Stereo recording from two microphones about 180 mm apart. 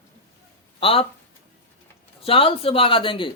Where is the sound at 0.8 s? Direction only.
30° left (ahead or behind).